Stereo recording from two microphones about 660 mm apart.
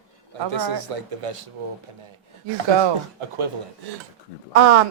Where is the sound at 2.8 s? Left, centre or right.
Right.